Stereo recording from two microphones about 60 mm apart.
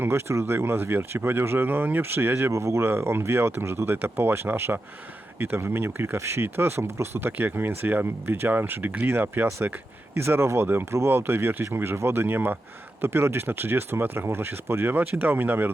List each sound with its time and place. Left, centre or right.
0.0 s speech: right
2.5 s speech: right